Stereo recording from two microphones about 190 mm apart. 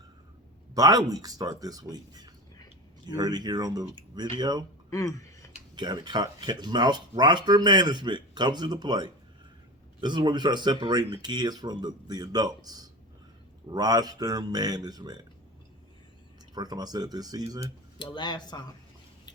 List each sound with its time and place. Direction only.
0.7 s speech: 20° right (ahead or behind)
4.9 s a sound: 15° left (ahead or behind)
5.7 s speech: 25° right (ahead or behind)
16.6 s speech: 20° right (ahead or behind)
18.0 s speech: 25° left (ahead or behind)